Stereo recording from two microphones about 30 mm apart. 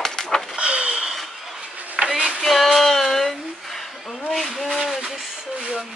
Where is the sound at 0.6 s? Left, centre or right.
Right.